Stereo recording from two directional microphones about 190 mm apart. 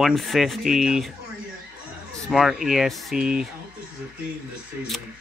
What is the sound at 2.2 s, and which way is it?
Speech, centre (ahead or behind).